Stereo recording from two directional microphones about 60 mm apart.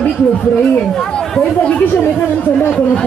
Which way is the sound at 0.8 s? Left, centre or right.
Centre.